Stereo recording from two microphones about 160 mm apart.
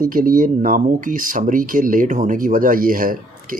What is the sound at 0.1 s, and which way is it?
Speech, 60° right (ahead or behind).